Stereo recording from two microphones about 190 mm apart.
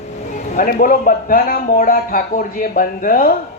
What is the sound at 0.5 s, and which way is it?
A man's voice, 45° left (ahead or behind).